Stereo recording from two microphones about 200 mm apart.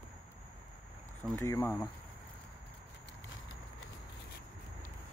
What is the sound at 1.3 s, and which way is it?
Speech, 15° left (ahead or behind).